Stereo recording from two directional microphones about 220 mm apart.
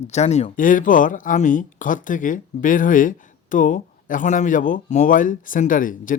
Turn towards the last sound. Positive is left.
turn(degrees=35)  # may be behind; listen again after turning